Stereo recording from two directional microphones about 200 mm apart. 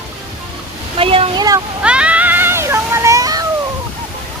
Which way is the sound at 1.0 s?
30° right (ahead or behind).